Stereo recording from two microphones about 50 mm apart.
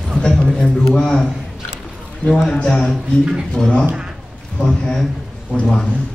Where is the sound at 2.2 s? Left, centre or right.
Left.